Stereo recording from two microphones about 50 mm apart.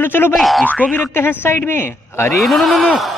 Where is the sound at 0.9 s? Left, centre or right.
Left.